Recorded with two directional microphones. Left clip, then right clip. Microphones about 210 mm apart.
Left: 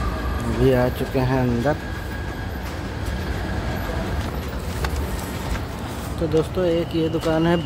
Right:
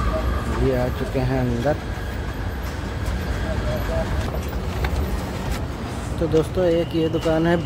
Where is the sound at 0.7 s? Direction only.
15° left (ahead or behind).